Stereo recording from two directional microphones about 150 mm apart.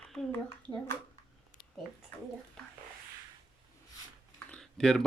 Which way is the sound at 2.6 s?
5° left (ahead or behind).